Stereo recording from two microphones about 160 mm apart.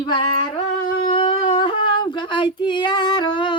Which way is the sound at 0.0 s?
30° left (ahead or behind).